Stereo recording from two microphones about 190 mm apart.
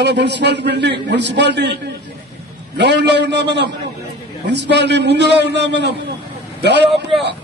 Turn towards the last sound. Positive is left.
turn(degrees=0)  # may be behind; listen again after turning